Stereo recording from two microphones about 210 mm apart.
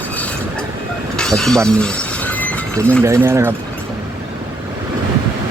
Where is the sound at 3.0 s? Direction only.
10° right (ahead or behind).